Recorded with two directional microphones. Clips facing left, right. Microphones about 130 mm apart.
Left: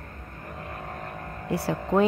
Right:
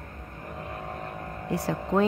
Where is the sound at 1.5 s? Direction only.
10° left (ahead or behind).